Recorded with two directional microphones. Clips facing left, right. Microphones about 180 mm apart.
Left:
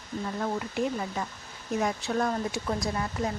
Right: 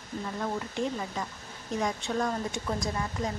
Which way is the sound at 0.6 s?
10° left (ahead or behind).